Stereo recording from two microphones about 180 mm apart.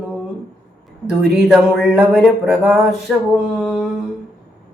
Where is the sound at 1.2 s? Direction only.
Centre (ahead or behind).